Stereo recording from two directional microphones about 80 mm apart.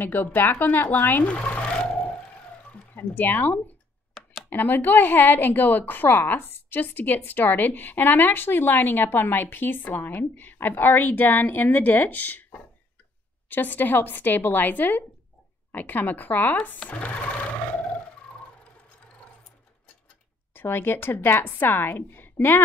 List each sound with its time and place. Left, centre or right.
0.0 s speech: left
4.1 s a sound: centre
4.5 s a woman's voice: left
20.5 s a woman's voice: left